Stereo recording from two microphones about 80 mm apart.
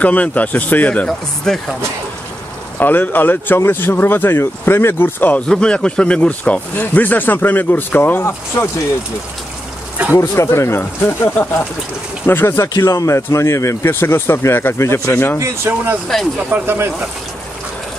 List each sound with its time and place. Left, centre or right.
0.0 s speech: centre
1.0 s speech: centre
2.8 s speech: left
5.5 s speech: centre; by 8.6 s left
10.1 s speech: left
12.6 s speech: left
15.3 s speech: right